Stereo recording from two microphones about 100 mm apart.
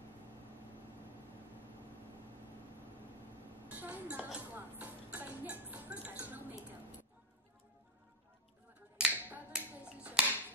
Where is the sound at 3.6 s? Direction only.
15° right (ahead or behind).